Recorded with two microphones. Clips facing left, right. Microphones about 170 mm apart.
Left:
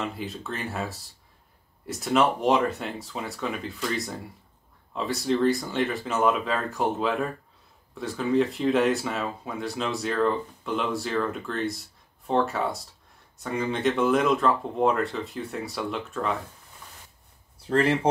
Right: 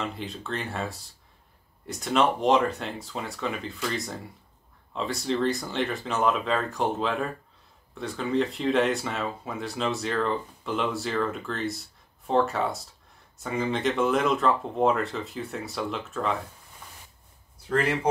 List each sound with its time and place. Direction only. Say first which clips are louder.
0.0 s speech: left 1 dB; centre (ahead or behind)
17.6 s speech: left 3 dB; 30° left (ahead or behind)